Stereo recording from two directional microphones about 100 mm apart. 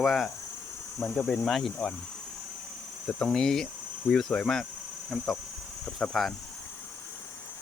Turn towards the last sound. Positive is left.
turn(degrees=0)  # may be behind; listen again after turning